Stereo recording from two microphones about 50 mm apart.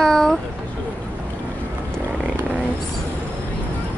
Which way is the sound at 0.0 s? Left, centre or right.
Centre.